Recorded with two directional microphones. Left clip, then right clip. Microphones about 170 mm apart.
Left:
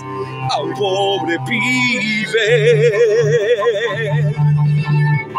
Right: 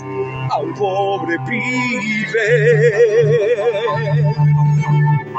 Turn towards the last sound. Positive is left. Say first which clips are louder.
# even
turn(degrees=15)  # may be behind; listen again after turning